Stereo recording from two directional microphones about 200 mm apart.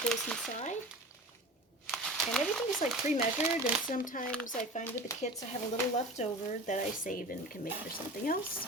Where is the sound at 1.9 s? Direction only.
Centre (ahead or behind).